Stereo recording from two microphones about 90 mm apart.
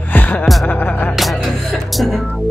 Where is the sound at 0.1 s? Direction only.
20° left (ahead or behind).